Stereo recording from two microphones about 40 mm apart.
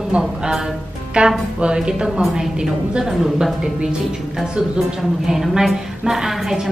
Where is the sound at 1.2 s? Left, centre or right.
Right; by 3.4 s centre.